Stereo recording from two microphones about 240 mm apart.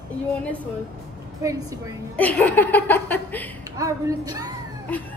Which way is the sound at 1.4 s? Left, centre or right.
Centre.